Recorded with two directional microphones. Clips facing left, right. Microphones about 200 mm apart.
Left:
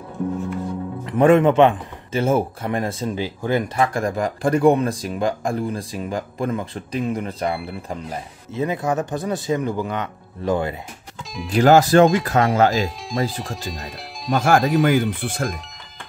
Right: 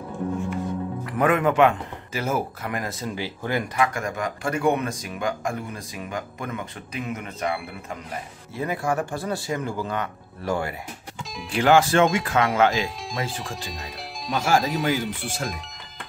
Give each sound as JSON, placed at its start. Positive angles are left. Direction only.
{"t": 1.1, "sound": "a man's voice", "side_deg": 25}
{"t": 3.7, "sound": "speech", "side_deg": 35}
{"t": 8.5, "sound": "a man's voice", "side_deg": 20}
{"t": 11.5, "sound": "speech", "side_deg": 40}
{"t": 13.4, "sound": "speech", "side_deg": 0}
{"t": 14.3, "sound": "speech", "side_deg": 55}
{"t": 14.6, "sound": "speech", "side_deg": 0}
{"t": 14.9, "sound": "speech", "side_deg": 55}